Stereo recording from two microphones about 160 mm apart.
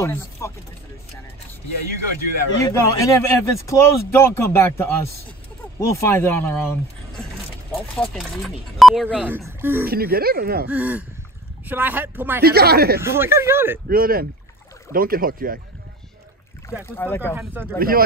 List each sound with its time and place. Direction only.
0.0 s speech: 20° left (ahead or behind)
2.6 s speech: 20° left (ahead or behind); by 9.8 s 15° right (ahead or behind)
9.8 s speech: 75° right (ahead or behind)
10.7 s speech: 10° right (ahead or behind)
12.4 s speech: 80° right
13.0 s speech: 15° right (ahead or behind)
13.8 s speech: 70° right (ahead or behind)
16.8 s speech: 15° left (ahead or behind)
17.4 s speech: 15° right (ahead or behind)
17.7 s speech: 65° right (ahead or behind)